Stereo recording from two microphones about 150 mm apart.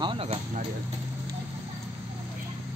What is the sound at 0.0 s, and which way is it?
Speech, 35° right (ahead or behind).